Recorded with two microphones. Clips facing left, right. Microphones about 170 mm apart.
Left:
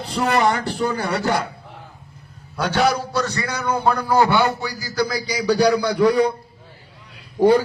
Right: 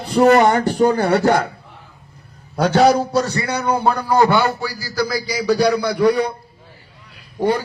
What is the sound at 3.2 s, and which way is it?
Speech, 30° right (ahead or behind).